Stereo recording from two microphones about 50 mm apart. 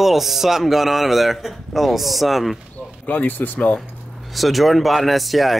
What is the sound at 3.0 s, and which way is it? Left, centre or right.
Speech, left.